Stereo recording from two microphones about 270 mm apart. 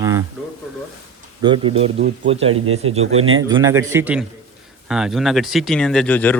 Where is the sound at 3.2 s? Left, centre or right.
Right.